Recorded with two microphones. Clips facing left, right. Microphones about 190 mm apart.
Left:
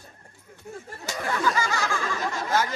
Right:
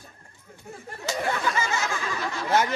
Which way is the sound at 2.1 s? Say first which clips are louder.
Left 2 dB; 45° left (ahead or behind).